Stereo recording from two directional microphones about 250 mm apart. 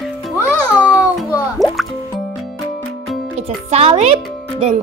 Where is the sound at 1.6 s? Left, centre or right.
Centre.